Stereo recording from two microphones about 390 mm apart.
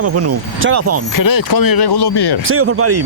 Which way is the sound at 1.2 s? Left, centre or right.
Left.